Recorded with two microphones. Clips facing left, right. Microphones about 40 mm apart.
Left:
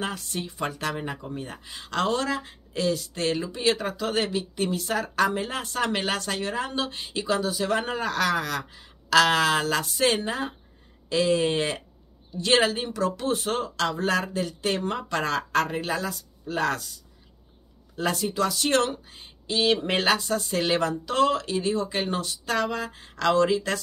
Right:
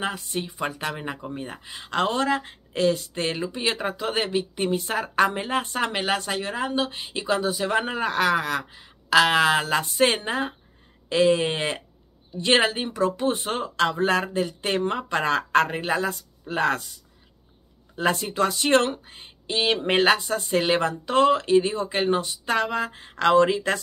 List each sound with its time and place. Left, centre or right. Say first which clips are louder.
0.0 s a woman's voice: right 2 dB; centre
17.9 s speech: right 2 dB; right